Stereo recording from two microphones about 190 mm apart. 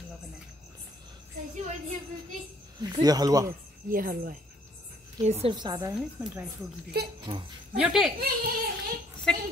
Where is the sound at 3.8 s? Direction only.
45° right (ahead or behind).